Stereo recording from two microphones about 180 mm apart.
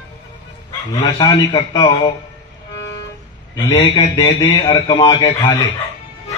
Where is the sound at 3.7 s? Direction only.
30° left (ahead or behind).